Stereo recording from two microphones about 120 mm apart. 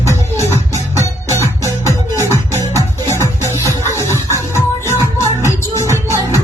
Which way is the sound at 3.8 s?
25° right (ahead or behind).